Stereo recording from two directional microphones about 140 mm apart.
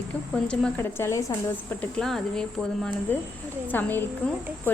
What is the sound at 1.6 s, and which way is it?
Speech, 5° left (ahead or behind).